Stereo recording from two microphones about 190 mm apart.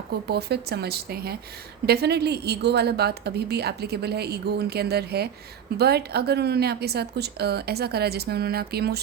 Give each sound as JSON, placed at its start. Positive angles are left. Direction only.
{"t": 0.3, "sound": "a woman's voice", "side_deg": -60}